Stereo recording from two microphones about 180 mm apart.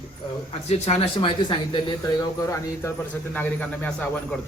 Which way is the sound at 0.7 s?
35° left (ahead or behind).